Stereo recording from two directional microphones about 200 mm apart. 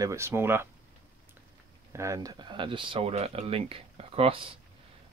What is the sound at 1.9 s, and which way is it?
Speech, 15° right (ahead or behind).